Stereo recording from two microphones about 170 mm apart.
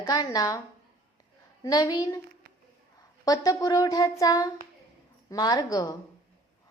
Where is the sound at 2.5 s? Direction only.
60° right (ahead or behind).